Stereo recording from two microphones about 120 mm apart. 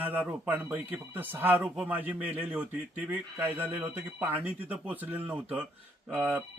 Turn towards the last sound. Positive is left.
turn(degrees=-15)  # may be behind; listen again after turning